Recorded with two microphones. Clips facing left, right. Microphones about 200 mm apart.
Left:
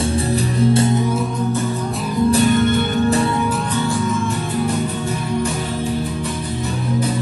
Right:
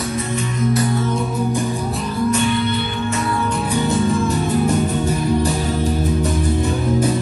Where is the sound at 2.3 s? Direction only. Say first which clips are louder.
Left 5 dB; 40° left (ahead or behind).